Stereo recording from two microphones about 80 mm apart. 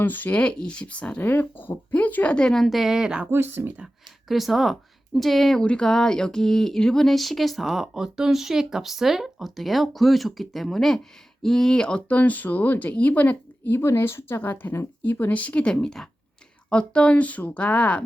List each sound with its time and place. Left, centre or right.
0.0 s speech: left
1.3 s speech: left; by 3.2 s centre
3.2 s speech: right
4.3 s speech: centre